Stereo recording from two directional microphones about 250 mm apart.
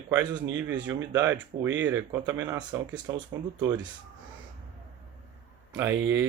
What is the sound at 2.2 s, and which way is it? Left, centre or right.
Speech, centre.